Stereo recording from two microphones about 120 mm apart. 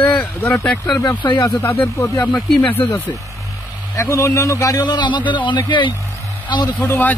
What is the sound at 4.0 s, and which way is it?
A man's voice, 25° left (ahead or behind).